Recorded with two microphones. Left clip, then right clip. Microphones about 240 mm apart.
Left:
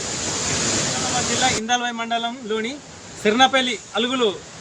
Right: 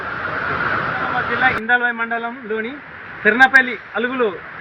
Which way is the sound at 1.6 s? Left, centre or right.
Centre.